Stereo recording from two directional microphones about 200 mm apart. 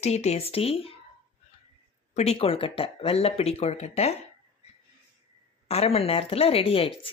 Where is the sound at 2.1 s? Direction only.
35° left (ahead or behind).